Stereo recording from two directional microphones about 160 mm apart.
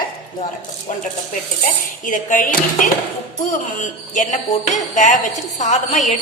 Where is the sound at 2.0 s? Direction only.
55° left (ahead or behind).